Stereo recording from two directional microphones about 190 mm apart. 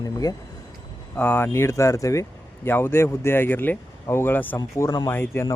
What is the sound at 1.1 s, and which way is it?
Speech, 10° left (ahead or behind).